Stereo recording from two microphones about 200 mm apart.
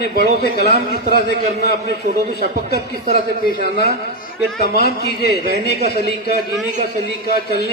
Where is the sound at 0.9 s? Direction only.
45° right (ahead or behind).